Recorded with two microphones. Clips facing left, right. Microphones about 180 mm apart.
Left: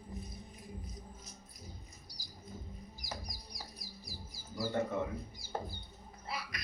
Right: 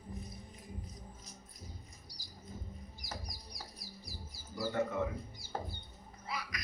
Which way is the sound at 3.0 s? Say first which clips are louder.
Left 1 dB; 10° left (ahead or behind).